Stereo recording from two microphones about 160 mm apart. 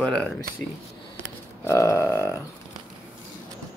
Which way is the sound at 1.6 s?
20° left (ahead or behind).